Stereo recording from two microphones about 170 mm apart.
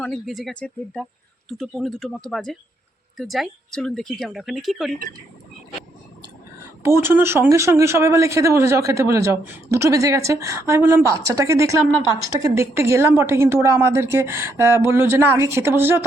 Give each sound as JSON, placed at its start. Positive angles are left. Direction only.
{"t": 0.0, "sound": "a woman's voice", "side_deg": 0}
{"t": 6.8, "sound": "speech", "side_deg": -15}